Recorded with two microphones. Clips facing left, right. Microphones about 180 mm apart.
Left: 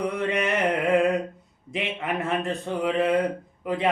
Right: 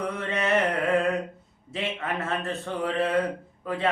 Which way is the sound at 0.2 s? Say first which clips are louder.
Left 3 dB; 15° left (ahead or behind).